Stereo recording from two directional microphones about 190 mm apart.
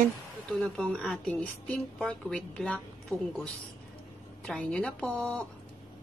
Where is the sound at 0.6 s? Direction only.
5° left (ahead or behind).